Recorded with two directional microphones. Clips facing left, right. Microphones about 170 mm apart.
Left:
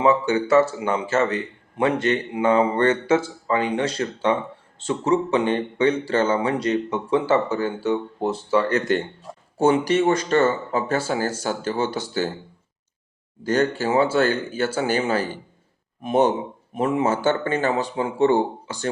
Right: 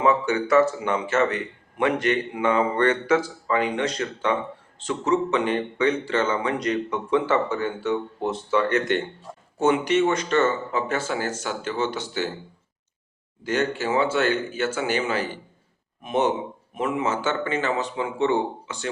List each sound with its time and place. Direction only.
0.0 s a man's voice: 30° left (ahead or behind)
13.4 s speech: 35° left (ahead or behind)